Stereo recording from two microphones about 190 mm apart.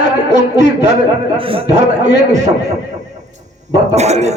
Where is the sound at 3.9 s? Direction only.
35° right (ahead or behind).